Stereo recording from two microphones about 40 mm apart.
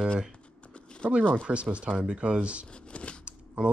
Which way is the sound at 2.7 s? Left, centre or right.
Left.